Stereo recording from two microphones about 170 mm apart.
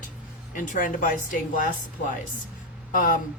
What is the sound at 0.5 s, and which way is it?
Speech, 50° left (ahead or behind).